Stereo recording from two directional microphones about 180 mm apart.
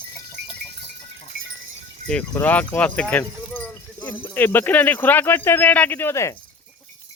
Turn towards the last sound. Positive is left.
turn(degrees=15)  # may be behind; listen again after turning